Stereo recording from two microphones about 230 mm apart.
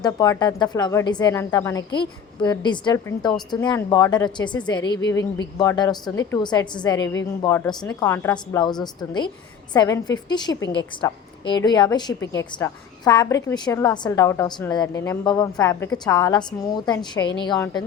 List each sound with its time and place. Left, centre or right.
0.0 s a woman's voice: centre
4.9 s a woman's voice: left
5.5 s a woman's voice: centre
7.0 s a woman's voice: left
7.4 s a woman's voice: centre